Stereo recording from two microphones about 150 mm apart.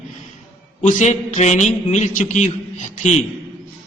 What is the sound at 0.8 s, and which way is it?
A man's voice, 50° left (ahead or behind).